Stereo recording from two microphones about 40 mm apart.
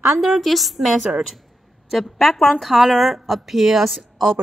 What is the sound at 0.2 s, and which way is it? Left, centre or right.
A woman's voice, centre.